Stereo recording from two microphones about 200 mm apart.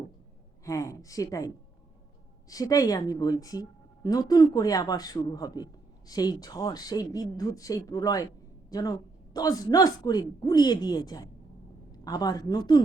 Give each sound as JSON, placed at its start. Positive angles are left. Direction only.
{"t": 0.6, "sound": "a woman's voice", "side_deg": 15}
{"t": 2.5, "sound": "a woman's voice", "side_deg": 15}